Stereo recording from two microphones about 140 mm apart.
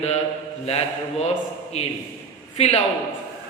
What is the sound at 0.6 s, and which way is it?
A man's voice, 50° left (ahead or behind).